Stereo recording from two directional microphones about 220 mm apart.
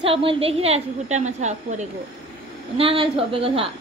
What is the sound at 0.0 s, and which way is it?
A woman's voice, 25° right (ahead or behind).